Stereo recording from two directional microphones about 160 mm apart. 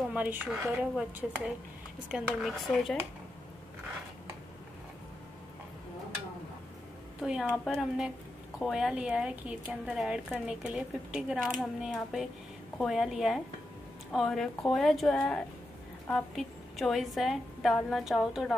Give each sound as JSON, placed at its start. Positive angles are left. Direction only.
{"t": 0.1, "sound": "a woman's voice", "side_deg": -10}
{"t": 7.2, "sound": "a woman's voice", "side_deg": -5}